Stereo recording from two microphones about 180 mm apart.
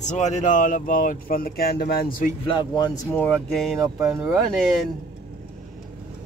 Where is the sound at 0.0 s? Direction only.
40° left (ahead or behind).